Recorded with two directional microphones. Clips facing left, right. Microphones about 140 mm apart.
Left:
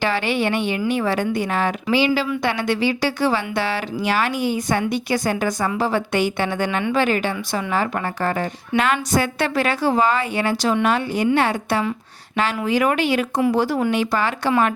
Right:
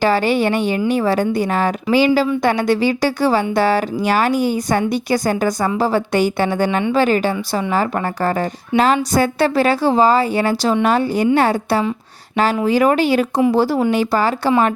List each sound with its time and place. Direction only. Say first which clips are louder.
0.0 s a woman's voice: right 5 dB; 40° right (ahead or behind)